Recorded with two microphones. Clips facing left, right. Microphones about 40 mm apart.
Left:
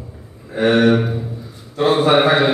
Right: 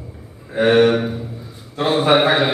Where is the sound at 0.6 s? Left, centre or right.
Centre.